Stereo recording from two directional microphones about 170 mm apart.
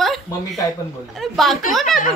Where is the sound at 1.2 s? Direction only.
Centre (ahead or behind).